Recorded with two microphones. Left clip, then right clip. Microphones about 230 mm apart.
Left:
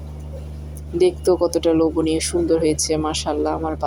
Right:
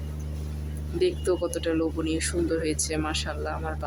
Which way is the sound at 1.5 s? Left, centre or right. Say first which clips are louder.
Left 10 dB; centre.